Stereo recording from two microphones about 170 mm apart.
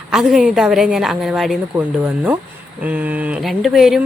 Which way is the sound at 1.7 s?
10° right (ahead or behind).